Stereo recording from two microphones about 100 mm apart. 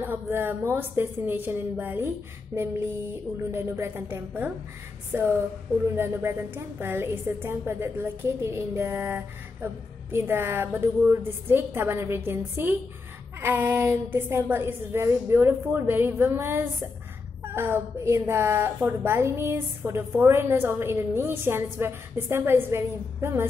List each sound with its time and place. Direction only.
0.0 s a woman's voice: 20° right (ahead or behind)